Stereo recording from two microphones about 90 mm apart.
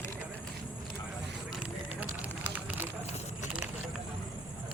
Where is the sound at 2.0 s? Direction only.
20° right (ahead or behind).